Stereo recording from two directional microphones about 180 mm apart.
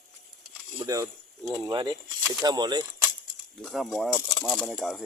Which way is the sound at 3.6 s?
Centre (ahead or behind).